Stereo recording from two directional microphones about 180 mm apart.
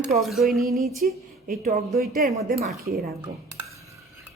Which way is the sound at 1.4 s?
55° right (ahead or behind).